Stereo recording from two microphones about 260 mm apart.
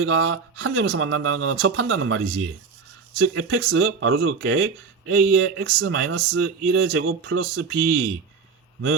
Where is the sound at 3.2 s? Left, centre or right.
Right.